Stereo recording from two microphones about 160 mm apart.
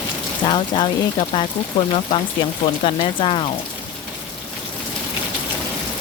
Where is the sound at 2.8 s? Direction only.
35° left (ahead or behind).